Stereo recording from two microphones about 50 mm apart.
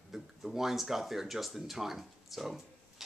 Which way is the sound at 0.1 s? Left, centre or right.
Centre.